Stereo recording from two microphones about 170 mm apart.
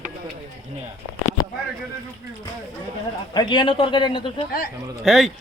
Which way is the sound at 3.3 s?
25° left (ahead or behind).